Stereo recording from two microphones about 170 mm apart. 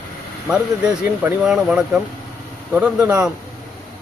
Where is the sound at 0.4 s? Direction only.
5° right (ahead or behind).